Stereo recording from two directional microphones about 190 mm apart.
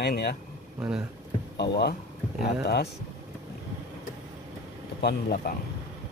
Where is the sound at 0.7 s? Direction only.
5° right (ahead or behind).